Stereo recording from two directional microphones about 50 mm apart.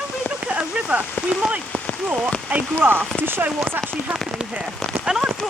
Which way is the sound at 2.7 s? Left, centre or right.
Right.